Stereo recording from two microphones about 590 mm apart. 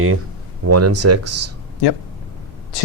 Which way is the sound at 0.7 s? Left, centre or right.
Right.